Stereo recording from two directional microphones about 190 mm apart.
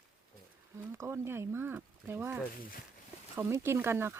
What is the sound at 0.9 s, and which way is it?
Speech, 15° right (ahead or behind).